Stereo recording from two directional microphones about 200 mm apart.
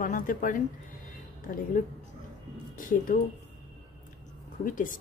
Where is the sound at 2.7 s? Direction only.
45° left (ahead or behind).